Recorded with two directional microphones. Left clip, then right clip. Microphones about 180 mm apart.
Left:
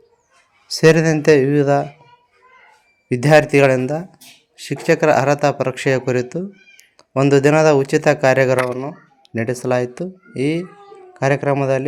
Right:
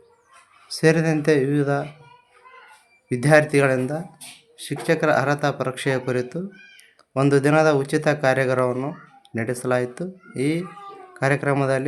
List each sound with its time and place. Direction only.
0.7 s speech: 25° left (ahead or behind)
3.1 s speech: 20° left (ahead or behind)